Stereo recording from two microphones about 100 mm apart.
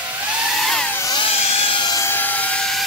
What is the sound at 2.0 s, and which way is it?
Aircraft, 20° left (ahead or behind).